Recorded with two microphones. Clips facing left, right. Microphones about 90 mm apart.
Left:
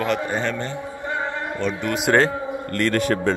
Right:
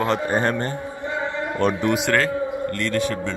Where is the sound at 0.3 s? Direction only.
45° right (ahead or behind).